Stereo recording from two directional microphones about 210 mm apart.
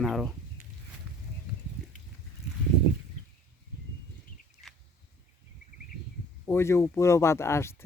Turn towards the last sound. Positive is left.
turn(degrees=10)  # may be behind; listen again after turning